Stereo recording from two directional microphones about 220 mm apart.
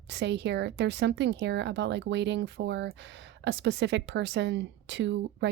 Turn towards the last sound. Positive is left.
turn(degrees=-55)  # may be behind; listen again after turning